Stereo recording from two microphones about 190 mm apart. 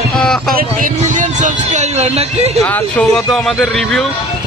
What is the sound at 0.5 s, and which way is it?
Speech, 45° right (ahead or behind).